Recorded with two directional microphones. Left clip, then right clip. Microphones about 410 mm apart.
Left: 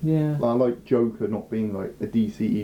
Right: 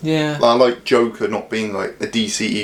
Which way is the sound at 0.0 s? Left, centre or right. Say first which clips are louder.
Right 9 dB; centre.